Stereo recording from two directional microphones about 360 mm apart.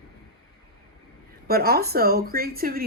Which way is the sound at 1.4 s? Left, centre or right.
Right.